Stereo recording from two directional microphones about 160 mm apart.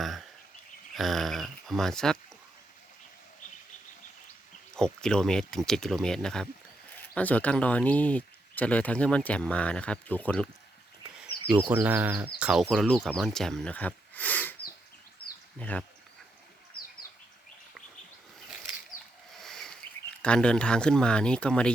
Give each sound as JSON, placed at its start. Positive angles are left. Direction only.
{"t": 0.0, "sound": "a sound", "side_deg": 0}
{"t": 0.9, "sound": "speech", "side_deg": 0}
{"t": 4.7, "sound": "speech", "side_deg": 5}
{"t": 11.4, "sound": "speech", "side_deg": -10}
{"t": 15.2, "sound": "bird", "side_deg": 70}
{"t": 15.5, "sound": "speech", "side_deg": 10}
{"t": 19.3, "sound": "a sound", "side_deg": 0}
{"t": 20.2, "sound": "speech", "side_deg": 5}